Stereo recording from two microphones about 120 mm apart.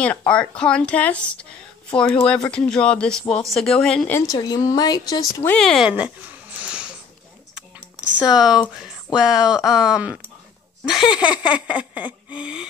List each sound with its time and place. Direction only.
0.0 s speech: 10° left (ahead or behind)
4.3 s speech: 30° left (ahead or behind)
5.6 s speech: 5° left (ahead or behind)
5.9 s a sound: 10° right (ahead or behind)
8.2 s speech: 5° right (ahead or behind)
10.9 s a sound: 5° right (ahead or behind)